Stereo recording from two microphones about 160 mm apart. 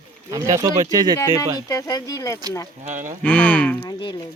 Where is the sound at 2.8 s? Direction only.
50° right (ahead or behind).